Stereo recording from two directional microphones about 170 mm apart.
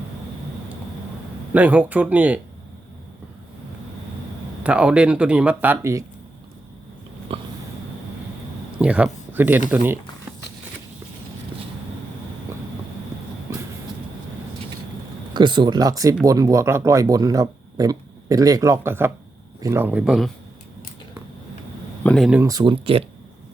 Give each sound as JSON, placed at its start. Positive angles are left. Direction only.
{"t": 1.5, "sound": "speech", "side_deg": -10}
{"t": 4.6, "sound": "speech", "side_deg": -5}
{"t": 7.3, "sound": "a sound", "side_deg": -35}
{"t": 8.8, "sound": "speech", "side_deg": -5}
{"t": 13.5, "sound": "train", "side_deg": -15}
{"t": 15.3, "sound": "speech", "side_deg": -25}
{"t": 22.0, "sound": "speech", "side_deg": 5}
{"t": 22.4, "sound": "speech", "side_deg": -25}